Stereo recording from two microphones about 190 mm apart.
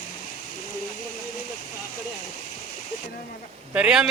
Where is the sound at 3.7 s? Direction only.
5° right (ahead or behind).